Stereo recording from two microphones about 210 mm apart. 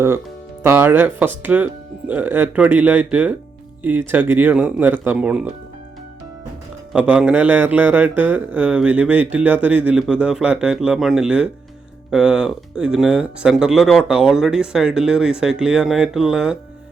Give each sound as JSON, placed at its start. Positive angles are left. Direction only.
{"t": 0.6, "sound": "speech", "side_deg": -10}
{"t": 6.9, "sound": "a man's voice", "side_deg": -5}